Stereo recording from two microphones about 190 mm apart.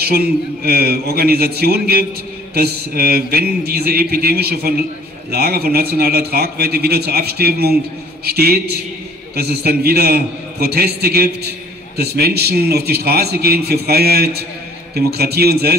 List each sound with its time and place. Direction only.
0.0 s a man's voice: 55° right (ahead or behind)